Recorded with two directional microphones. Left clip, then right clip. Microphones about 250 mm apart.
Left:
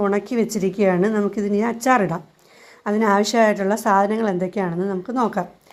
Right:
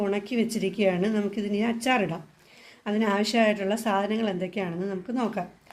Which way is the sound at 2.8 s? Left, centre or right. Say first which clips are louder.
Left 8 dB; centre.